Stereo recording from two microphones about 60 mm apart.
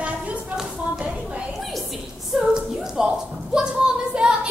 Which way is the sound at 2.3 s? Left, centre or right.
Centre.